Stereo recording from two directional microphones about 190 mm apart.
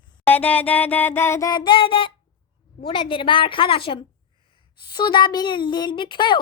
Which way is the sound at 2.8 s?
30° left (ahead or behind).